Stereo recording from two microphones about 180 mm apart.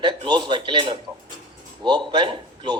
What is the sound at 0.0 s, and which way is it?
A man's voice, 25° right (ahead or behind).